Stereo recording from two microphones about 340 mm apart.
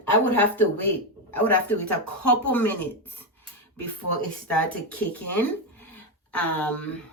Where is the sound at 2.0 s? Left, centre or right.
Left.